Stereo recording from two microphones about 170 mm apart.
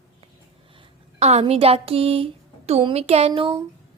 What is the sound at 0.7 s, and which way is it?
A woman's voice, 35° right (ahead or behind).